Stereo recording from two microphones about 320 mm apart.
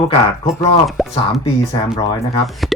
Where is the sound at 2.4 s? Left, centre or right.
Centre.